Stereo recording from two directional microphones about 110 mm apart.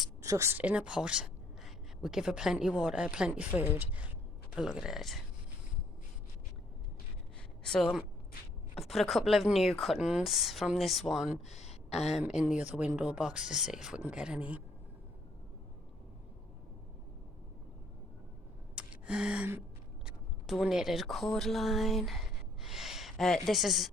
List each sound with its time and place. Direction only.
0.2 s a woman's voice: 30° right (ahead or behind)
0.6 s speech: 10° right (ahead or behind)
7.6 s a woman's voice: 5° left (ahead or behind)
11.5 s a sound: 80° left
12.1 s speech: 5° right (ahead or behind)
18.8 s gasp: 10° right (ahead or behind)
20.1 s speech: 5° right (ahead or behind)